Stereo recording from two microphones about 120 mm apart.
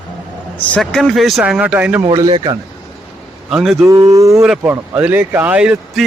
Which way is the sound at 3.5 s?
5° right (ahead or behind).